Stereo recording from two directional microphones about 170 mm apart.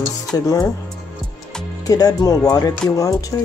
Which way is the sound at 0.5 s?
20° left (ahead or behind).